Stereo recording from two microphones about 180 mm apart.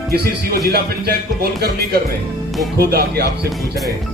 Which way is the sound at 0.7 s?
60° right (ahead or behind).